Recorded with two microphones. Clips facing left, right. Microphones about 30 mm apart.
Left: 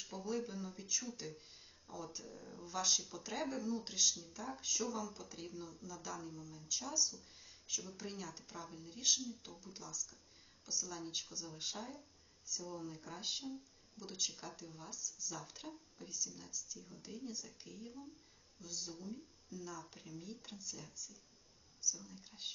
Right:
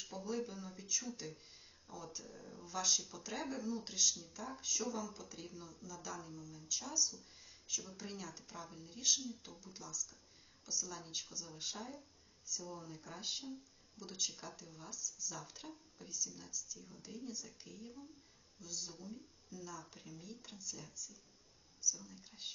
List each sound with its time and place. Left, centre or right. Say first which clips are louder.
0.0 s speech: even; centre